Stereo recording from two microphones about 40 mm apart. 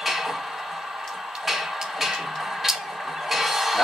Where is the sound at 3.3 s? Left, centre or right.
Centre.